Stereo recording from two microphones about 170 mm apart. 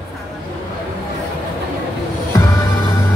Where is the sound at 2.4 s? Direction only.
15° left (ahead or behind).